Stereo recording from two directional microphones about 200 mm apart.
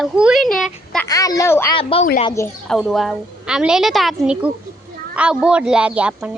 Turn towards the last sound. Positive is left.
turn(degrees=-5)  # may be behind; listen again after turning